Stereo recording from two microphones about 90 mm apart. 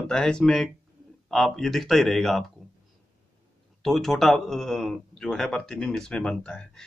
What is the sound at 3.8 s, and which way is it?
Speech, 5° left (ahead or behind).